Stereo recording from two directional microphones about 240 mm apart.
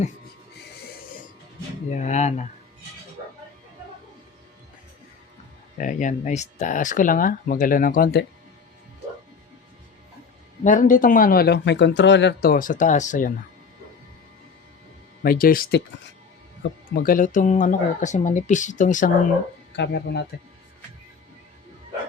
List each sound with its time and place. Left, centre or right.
1.9 s speech: left
5.7 s speech: left
10.6 s speech: left
15.2 s speech: left
19.7 s speech: left